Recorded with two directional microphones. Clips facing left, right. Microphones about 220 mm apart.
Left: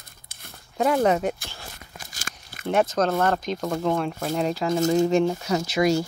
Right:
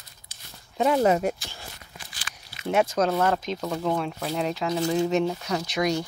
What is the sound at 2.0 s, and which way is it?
Crunch, 45° left (ahead or behind).